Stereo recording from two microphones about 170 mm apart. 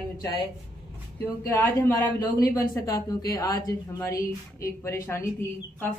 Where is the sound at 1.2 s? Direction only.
10° left (ahead or behind).